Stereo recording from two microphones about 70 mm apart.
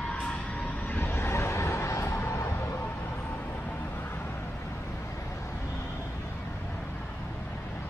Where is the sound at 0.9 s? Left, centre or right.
Left.